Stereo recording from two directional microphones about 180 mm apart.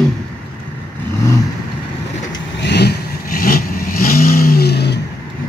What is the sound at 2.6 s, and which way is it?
Vehicle, 65° left (ahead or behind).